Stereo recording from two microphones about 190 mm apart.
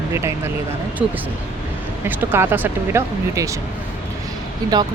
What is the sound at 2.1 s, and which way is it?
Speech, 10° right (ahead or behind).